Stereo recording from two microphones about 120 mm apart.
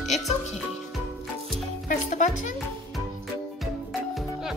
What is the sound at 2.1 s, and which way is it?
Speech, 90° left.